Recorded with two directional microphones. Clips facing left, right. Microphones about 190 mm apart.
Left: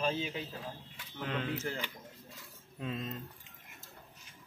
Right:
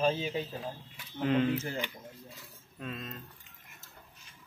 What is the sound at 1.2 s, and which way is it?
Speech, 10° right (ahead or behind).